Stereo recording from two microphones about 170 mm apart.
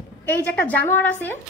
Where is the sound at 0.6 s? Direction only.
10° left (ahead or behind).